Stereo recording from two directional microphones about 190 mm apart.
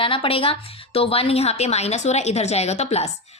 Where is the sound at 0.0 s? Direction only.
30° left (ahead or behind).